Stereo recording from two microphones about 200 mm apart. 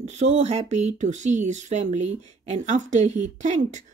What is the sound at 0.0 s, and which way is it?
Speech, 35° right (ahead or behind).